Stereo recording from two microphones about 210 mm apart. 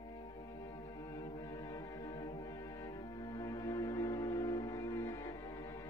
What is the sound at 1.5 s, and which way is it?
Music, 15° left (ahead or behind).